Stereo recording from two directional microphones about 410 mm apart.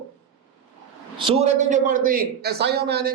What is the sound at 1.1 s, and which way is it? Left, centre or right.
A man's voice, centre.